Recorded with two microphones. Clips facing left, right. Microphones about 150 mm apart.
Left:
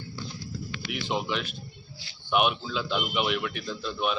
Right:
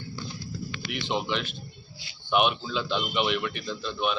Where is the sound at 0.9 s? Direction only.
5° left (ahead or behind).